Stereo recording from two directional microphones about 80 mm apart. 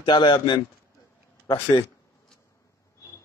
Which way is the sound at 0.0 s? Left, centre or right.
Left.